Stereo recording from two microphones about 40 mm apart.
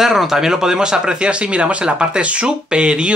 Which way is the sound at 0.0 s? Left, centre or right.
Centre.